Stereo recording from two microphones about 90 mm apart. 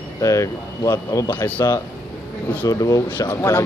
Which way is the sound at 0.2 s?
35° left (ahead or behind).